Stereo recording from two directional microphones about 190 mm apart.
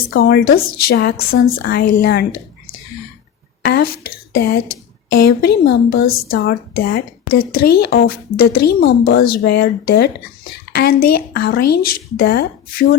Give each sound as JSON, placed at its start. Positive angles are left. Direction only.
{"t": 0.1, "sound": "speech", "side_deg": 55}
{"t": 3.6, "sound": "a sound", "side_deg": 55}
{"t": 4.4, "sound": "speech", "side_deg": 50}